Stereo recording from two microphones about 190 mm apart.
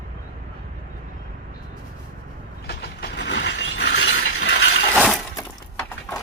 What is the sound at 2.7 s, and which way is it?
Ratchet, 60° left (ahead or behind).